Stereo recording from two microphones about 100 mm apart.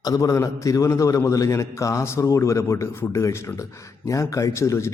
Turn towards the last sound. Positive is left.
turn(degrees=30)  # may be behind; listen again after turning